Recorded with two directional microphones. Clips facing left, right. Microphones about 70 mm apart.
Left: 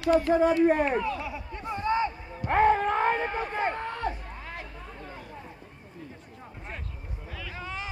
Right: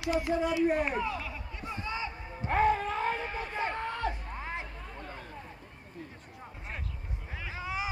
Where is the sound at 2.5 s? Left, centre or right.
Left.